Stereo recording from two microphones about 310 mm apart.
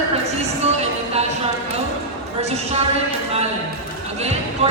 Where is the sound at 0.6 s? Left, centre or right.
Centre.